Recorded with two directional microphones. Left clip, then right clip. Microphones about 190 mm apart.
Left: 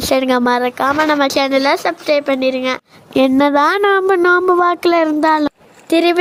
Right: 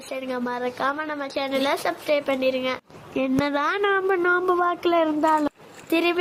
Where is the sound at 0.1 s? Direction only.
45° left (ahead or behind).